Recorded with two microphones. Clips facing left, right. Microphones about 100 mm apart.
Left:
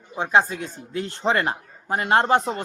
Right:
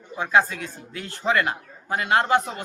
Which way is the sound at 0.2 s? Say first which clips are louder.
Left 1 dB; 25° left (ahead or behind).